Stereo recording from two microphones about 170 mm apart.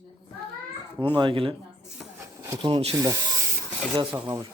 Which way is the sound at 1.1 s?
30° right (ahead or behind).